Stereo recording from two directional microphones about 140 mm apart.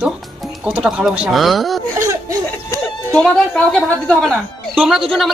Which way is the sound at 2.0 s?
20° right (ahead or behind).